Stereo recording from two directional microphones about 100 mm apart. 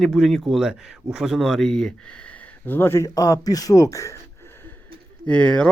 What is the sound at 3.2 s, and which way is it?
Speech, 40° left (ahead or behind).